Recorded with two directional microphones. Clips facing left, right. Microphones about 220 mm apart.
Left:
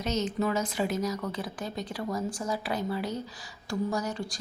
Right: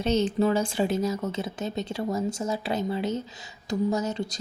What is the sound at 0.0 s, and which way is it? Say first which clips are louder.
Speech: right 6 dB; 30° right (ahead or behind).